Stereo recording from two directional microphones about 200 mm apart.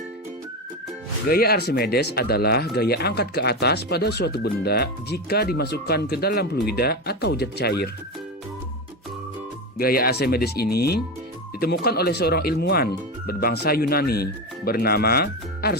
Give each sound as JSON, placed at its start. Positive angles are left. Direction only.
{"t": 1.3, "sound": "speech", "side_deg": 50}
{"t": 9.7, "sound": "speech", "side_deg": 50}